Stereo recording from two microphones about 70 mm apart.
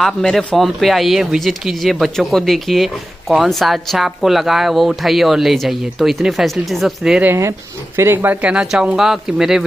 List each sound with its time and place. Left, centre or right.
0.0 s speech: centre
0.6 s speech: centre
7.3 s speech: right
8.4 s speech: centre